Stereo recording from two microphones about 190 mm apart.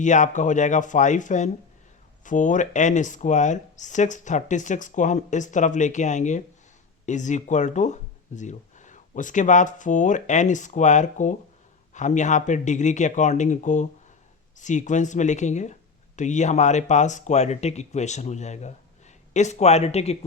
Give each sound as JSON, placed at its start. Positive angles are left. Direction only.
{"t": 0.0, "sound": "speech", "side_deg": 40}